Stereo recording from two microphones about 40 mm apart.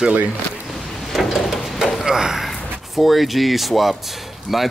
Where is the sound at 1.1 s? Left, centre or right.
Centre.